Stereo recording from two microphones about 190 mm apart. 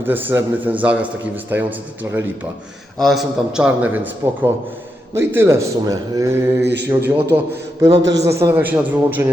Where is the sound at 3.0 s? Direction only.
Centre (ahead or behind); by 6.4 s 15° right (ahead or behind).